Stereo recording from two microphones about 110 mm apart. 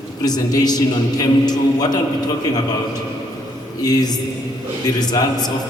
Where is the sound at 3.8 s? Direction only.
35° left (ahead or behind).